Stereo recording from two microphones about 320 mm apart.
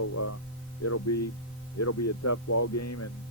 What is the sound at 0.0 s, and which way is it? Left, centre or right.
Speech, left.